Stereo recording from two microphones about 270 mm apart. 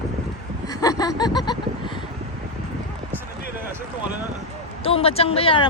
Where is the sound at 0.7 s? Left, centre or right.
Centre.